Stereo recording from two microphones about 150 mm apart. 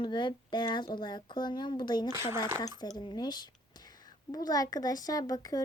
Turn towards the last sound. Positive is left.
turn(degrees=25)  # may be behind; listen again after turning